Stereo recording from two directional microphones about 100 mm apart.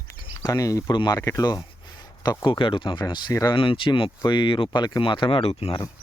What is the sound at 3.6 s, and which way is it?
Speech, 60° left (ahead or behind).